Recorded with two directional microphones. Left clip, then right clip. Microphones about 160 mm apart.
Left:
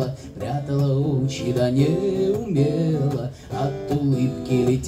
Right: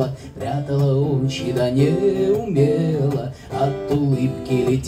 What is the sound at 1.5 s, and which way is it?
Music, 25° left (ahead or behind).